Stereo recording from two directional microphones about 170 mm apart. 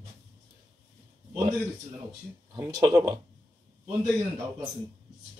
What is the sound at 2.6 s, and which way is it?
Speech, 25° right (ahead or behind).